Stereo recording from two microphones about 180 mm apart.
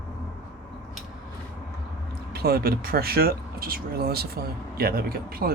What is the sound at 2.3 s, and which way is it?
Speech, 60° right (ahead or behind).